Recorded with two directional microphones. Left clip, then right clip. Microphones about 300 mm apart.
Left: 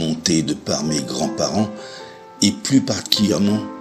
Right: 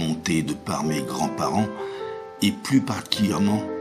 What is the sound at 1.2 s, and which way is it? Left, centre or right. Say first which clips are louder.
Speech: left 3 dB; right.